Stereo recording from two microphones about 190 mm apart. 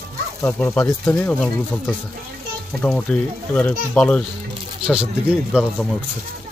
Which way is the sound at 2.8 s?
5° left (ahead or behind).